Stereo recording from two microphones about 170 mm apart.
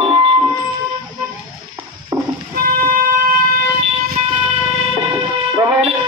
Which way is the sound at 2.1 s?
25° right (ahead or behind).